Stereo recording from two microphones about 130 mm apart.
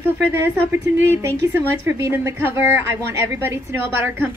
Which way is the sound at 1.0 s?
20° right (ahead or behind).